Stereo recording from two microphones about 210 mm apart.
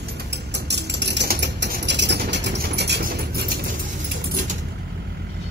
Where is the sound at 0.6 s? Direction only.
55° right (ahead or behind).